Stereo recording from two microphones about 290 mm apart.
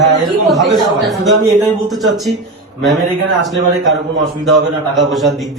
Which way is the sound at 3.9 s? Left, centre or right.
Right.